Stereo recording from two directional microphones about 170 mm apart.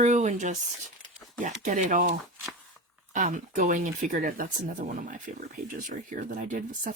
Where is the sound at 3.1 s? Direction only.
50° right (ahead or behind).